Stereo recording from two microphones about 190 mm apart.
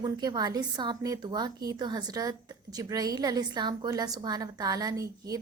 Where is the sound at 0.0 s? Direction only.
20° right (ahead or behind).